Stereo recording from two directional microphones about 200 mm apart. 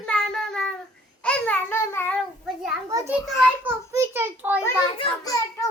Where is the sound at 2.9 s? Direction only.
10° right (ahead or behind).